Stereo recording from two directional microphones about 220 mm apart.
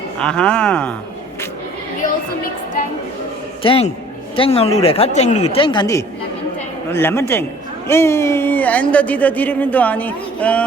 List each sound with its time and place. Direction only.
0.2 s speech: 5° left (ahead or behind)
3.6 s speech: 25° left (ahead or behind); by 10.7 s 5° left (ahead or behind)